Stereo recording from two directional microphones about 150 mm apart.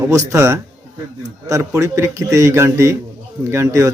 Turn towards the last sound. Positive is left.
turn(degrees=-20)  # may be behind; listen again after turning